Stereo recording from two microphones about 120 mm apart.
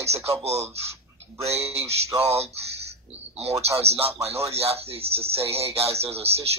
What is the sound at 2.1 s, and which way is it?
A man's voice, 60° right (ahead or behind).